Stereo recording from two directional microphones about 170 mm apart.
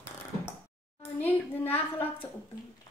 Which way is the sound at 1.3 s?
10° left (ahead or behind).